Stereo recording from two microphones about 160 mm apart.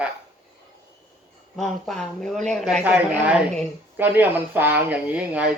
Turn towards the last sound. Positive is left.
turn(degrees=-10)  # may be behind; listen again after turning